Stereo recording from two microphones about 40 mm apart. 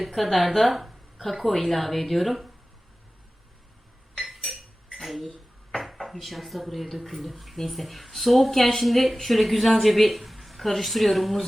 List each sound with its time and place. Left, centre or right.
0.0 s speech: centre
4.2 s cutlery: centre
5.7 s speech: centre